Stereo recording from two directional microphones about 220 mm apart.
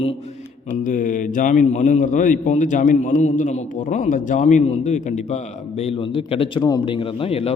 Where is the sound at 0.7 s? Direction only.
35° left (ahead or behind).